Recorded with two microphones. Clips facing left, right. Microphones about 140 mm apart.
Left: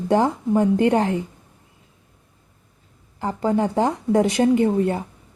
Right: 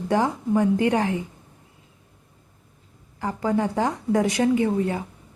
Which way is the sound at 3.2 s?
25° left (ahead or behind).